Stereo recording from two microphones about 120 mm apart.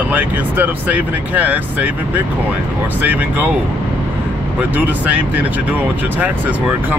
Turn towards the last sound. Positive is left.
turn(degrees=-10)  # may be behind; listen again after turning